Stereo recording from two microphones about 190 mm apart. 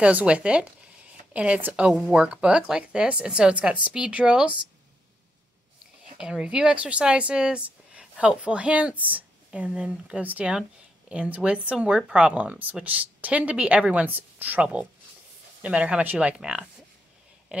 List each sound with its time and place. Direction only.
0.0 s speech: 5° right (ahead or behind)
6.1 s speech: 5° right (ahead or behind)